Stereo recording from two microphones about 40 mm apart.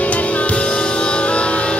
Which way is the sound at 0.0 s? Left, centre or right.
Left.